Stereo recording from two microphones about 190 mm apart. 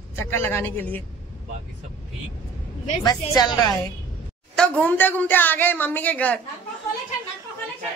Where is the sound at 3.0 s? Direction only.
20° left (ahead or behind).